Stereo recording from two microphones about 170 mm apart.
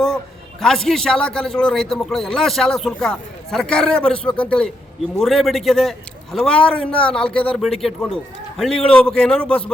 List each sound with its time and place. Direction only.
0.6 s a man's voice: centre (ahead or behind)